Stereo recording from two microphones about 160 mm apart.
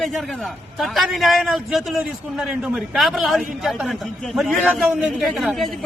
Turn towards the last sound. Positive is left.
turn(degrees=0)  # may be behind; listen again after turning